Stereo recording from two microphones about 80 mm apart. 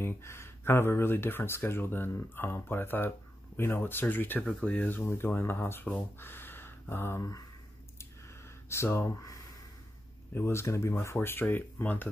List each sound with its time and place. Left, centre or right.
0.0 s speech: left
4.4 s speech: centre
4.6 s speech: left
6.1 s a sound: left
8.6 s speech: left
10.3 s speech: left